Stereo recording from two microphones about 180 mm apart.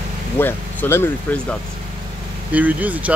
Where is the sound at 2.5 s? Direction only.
10° right (ahead or behind).